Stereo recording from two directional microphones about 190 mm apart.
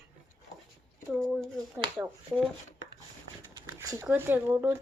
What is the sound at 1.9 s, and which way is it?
Speech, 5° right (ahead or behind).